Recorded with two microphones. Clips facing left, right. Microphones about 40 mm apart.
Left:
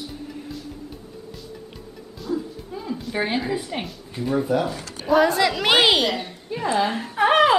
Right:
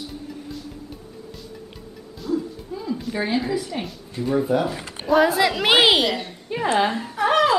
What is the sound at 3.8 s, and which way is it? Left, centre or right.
Speech, centre.